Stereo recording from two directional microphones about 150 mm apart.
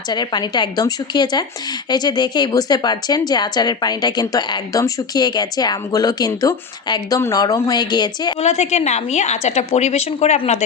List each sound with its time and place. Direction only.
0.1 s a woman's voice: 30° left (ahead or behind)
8.4 s a woman's voice: 45° left (ahead or behind)